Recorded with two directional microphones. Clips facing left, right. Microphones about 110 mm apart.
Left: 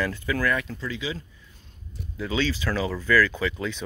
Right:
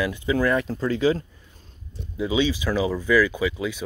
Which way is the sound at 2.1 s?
15° right (ahead or behind).